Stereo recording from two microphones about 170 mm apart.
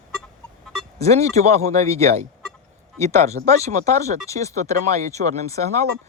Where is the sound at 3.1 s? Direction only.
15° left (ahead or behind).